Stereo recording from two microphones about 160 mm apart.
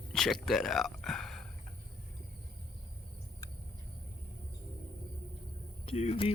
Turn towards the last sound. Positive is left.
turn(degrees=40)  # may be behind; listen again after turning